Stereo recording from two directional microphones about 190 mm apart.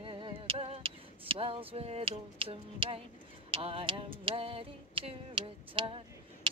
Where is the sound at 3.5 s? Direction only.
30° right (ahead or behind).